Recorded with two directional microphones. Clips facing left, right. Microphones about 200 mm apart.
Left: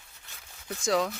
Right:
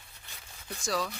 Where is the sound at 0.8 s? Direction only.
20° left (ahead or behind).